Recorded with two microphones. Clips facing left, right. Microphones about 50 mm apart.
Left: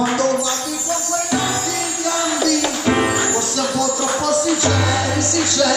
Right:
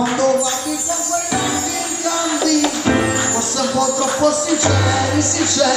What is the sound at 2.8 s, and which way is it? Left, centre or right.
Music, centre.